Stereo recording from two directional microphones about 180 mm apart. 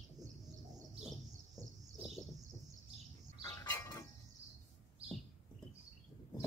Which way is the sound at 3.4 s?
20° left (ahead or behind).